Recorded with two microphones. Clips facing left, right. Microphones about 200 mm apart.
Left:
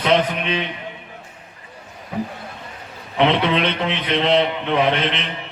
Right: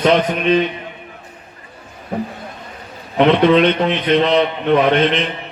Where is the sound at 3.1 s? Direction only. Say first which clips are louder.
Right 6 dB; 45° right (ahead or behind).